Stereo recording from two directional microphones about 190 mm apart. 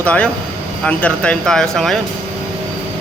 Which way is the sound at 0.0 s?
5° left (ahead or behind).